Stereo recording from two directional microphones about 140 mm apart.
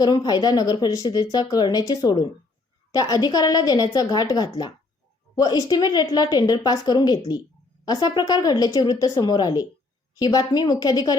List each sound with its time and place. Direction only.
0.0 s a woman's voice: 30° left (ahead or behind)